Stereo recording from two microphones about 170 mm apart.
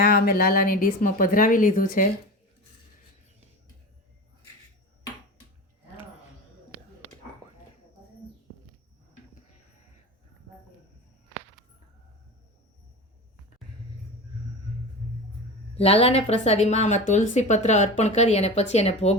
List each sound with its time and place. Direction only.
0.0 s speech: 60° left (ahead or behind)
15.7 s speech: 35° left (ahead or behind)